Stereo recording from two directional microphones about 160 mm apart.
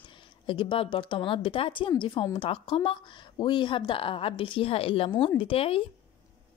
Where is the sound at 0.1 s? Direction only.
30° left (ahead or behind).